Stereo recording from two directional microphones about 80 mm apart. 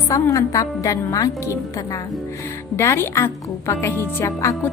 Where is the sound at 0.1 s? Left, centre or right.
Left.